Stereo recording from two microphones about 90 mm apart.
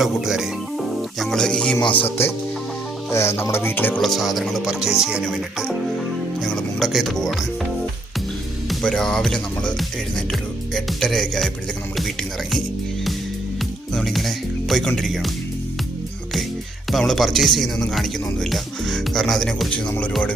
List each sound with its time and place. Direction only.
0.0 s speech: 5° right (ahead or behind)
2.0 s music: 25° left (ahead or behind)
4.0 s speech: centre (ahead or behind)
8.8 s speech: 5° left (ahead or behind)
13.9 s speech: centre (ahead or behind)
16.9 s speech: centre (ahead or behind)